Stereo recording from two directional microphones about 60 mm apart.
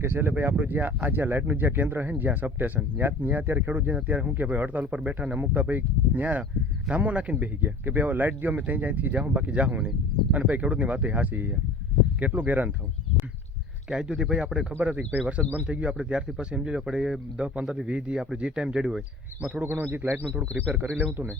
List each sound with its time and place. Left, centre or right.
0.0 s speech: right
13.9 s speech: centre
14.7 s speech: right
19.6 s speech: right